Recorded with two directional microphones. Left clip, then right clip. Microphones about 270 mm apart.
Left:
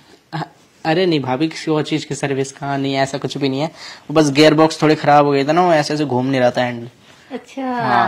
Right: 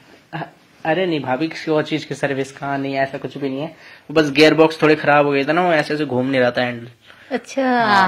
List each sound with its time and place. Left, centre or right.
0.3 s speech: left
2.7 s speech: left
4.1 s speech: left
7.2 s a woman's voice: centre